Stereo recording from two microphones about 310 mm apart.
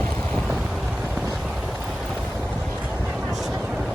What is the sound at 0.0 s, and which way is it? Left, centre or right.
Vehicle, centre.